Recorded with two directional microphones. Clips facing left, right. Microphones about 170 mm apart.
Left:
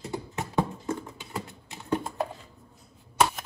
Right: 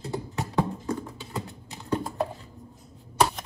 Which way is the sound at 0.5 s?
20° left (ahead or behind).